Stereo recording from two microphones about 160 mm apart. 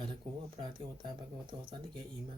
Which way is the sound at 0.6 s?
30° right (ahead or behind).